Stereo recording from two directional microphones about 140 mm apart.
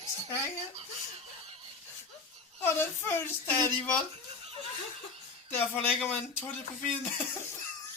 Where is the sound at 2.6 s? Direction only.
15° left (ahead or behind).